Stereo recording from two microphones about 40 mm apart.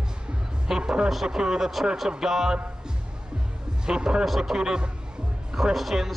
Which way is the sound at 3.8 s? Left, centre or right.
Centre.